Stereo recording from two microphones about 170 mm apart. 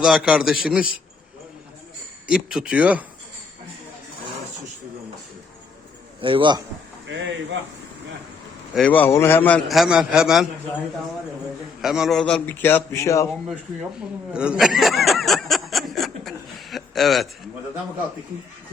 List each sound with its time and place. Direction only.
0.0 s a man's voice: 5° right (ahead or behind)
2.2 s speech: 5° right (ahead or behind)
6.2 s a man's voice: 30° right (ahead or behind)
8.7 s a man's voice: 10° left (ahead or behind)
9.6 s a man's voice: centre (ahead or behind)
11.8 s a man's voice: centre (ahead or behind); by 13.2 s 15° left (ahead or behind)
14.3 s snicker: 5° right (ahead or behind)